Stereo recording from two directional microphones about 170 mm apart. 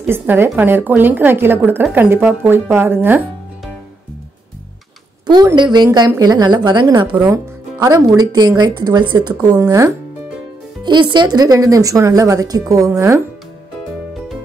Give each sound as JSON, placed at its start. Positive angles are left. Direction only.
{"t": 0.0, "sound": "a woman's voice", "side_deg": -10}
{"t": 5.2, "sound": "speech", "side_deg": -25}